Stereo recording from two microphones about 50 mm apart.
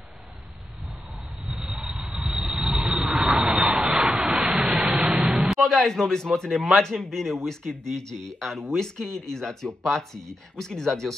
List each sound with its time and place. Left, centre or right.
1.8 s vehicle: centre
4.5 s rain: centre
4.9 s music: centre
5.6 s a man's voice: centre